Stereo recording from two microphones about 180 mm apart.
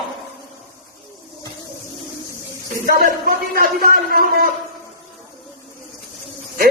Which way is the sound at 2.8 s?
50° right (ahead or behind).